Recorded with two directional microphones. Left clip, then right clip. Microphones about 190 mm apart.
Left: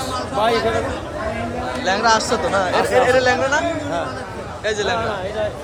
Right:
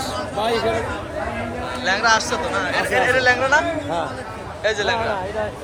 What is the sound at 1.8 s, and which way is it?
Speech, 20° left (ahead or behind).